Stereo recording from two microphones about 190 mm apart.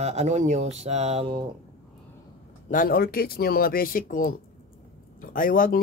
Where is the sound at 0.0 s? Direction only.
35° right (ahead or behind).